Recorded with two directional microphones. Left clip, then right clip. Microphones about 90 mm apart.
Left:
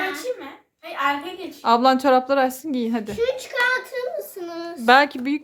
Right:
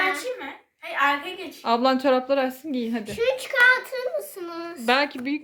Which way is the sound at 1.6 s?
25° left (ahead or behind).